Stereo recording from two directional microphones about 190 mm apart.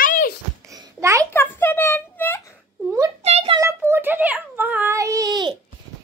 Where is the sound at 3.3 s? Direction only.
35° right (ahead or behind).